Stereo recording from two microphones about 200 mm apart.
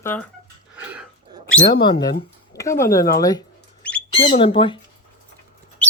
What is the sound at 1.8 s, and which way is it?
Speech, 20° left (ahead or behind).